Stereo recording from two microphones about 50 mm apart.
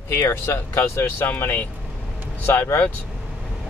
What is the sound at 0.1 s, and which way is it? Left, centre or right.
Speech, left.